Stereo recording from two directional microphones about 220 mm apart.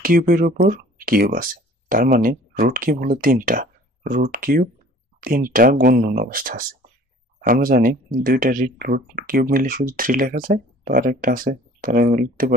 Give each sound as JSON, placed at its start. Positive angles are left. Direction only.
{"t": 0.0, "sound": "speech", "side_deg": -40}